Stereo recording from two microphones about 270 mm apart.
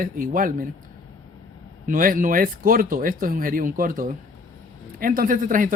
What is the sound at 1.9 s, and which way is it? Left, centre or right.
A man's voice, right.